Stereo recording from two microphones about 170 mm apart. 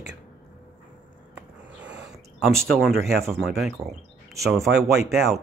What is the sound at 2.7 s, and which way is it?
Speech, centre (ahead or behind).